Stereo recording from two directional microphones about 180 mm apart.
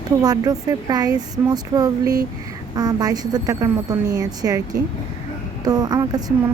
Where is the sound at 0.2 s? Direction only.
20° right (ahead or behind).